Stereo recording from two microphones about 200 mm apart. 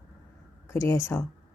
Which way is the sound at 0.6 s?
15° left (ahead or behind).